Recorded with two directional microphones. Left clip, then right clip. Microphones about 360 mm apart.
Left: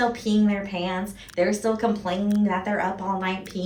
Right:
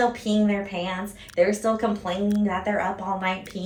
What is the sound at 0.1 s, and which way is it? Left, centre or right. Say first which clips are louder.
Speech: even; centre.